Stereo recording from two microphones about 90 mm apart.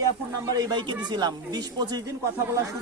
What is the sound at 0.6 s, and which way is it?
Speech, 55° right (ahead or behind).